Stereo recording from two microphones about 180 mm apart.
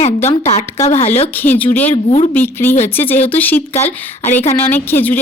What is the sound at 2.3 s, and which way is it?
Speech, 10° left (ahead or behind).